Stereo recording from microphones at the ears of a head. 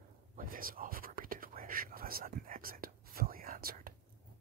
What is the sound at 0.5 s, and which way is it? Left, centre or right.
Whispering, right.